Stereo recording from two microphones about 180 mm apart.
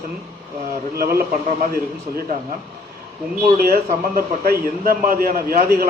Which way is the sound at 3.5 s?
55° right (ahead or behind).